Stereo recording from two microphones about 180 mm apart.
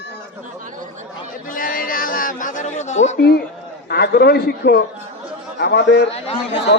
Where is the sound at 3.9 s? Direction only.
65° left (ahead or behind).